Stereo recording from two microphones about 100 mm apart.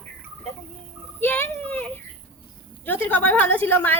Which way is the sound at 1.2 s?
20° left (ahead or behind).